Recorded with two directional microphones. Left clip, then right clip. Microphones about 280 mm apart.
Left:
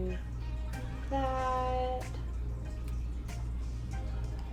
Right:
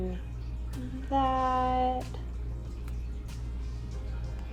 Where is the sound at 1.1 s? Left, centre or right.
Right.